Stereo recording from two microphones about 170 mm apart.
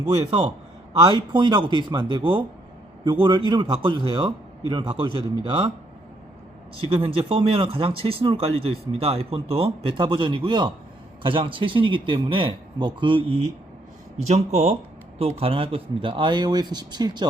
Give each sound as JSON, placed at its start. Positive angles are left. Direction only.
{"t": 0.3, "sound": "speech", "side_deg": -35}
{"t": 6.7, "sound": "speech", "side_deg": -30}